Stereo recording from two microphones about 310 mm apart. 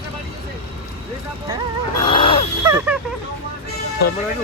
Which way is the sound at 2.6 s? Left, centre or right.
Centre.